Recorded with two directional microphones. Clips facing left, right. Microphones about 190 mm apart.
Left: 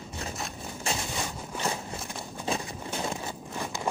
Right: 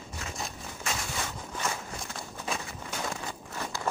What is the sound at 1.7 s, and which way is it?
Walk, 25° left (ahead or behind).